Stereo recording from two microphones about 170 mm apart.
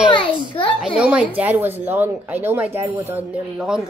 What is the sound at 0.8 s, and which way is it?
Speech, 5° right (ahead or behind).